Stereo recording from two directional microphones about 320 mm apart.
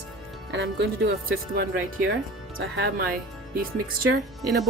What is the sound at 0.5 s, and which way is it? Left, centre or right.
Speech, right.